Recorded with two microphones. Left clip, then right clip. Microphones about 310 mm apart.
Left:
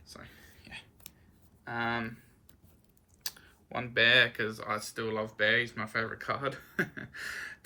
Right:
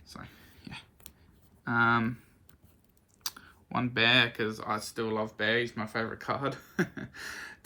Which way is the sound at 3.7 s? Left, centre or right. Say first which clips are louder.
Left 1 dB; centre.